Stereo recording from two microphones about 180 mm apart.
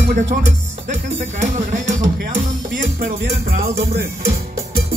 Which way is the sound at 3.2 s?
60° right (ahead or behind).